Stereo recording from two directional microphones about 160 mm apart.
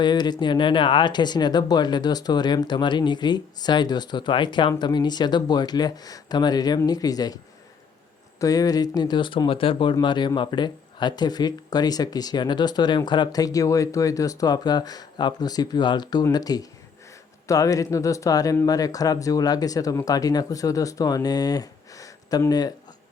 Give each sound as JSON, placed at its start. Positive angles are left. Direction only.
{"t": 0.0, "sound": "speech", "side_deg": 25}
{"t": 8.4, "sound": "speech", "side_deg": 20}